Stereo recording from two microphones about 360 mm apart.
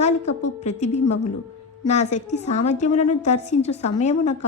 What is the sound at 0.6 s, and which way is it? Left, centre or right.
A woman's voice, centre.